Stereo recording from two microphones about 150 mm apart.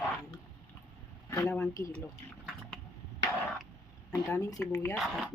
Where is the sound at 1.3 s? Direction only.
20° left (ahead or behind).